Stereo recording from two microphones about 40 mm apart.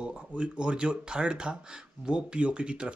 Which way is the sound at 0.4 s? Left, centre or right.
Right.